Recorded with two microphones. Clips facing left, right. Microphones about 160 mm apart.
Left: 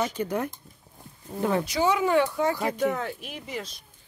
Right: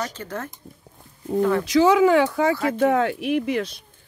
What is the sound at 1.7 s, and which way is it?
Speech, 90° right.